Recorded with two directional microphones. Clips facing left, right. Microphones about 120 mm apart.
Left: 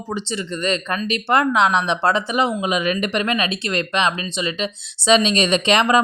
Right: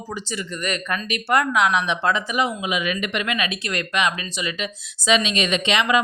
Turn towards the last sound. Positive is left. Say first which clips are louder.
# left 4 dB
turn(degrees=40)  # may be behind; listen again after turning